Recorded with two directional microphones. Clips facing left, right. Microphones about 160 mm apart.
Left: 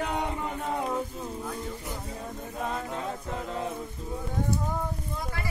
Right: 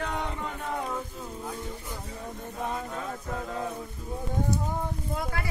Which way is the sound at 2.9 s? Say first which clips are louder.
Left 1 dB; 25° left (ahead or behind).